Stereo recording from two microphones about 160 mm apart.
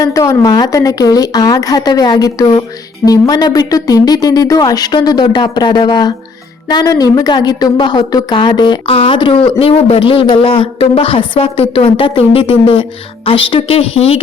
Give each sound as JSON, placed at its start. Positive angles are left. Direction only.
{"t": 0.0, "sound": "a woman's voice", "side_deg": 20}